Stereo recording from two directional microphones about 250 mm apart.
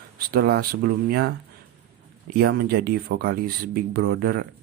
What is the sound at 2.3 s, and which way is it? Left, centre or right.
Speech, right.